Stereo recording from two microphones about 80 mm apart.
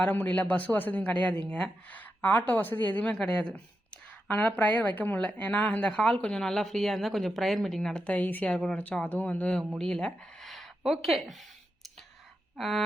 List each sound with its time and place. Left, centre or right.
0.0 s speech: left
8.4 s speech: centre
8.8 s speech: centre
9.7 s a sound: centre